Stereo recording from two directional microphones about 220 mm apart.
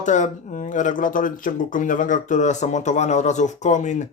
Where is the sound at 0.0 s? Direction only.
35° left (ahead or behind).